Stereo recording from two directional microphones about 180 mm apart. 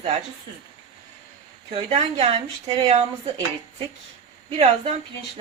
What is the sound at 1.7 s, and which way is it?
Speech, 30° right (ahead or behind).